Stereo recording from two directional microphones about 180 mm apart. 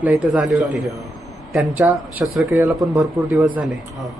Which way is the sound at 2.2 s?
Centre (ahead or behind).